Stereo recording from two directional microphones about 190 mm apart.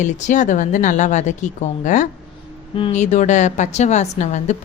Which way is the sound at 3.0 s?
40° left (ahead or behind).